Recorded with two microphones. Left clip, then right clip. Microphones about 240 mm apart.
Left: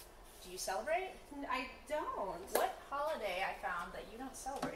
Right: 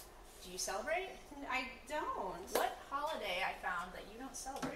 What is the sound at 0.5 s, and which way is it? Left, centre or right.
Speech, centre.